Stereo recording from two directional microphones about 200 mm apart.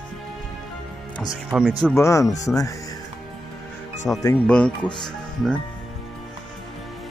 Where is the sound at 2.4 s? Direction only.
15° left (ahead or behind).